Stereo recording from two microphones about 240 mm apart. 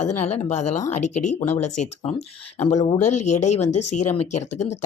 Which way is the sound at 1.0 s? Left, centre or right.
Left.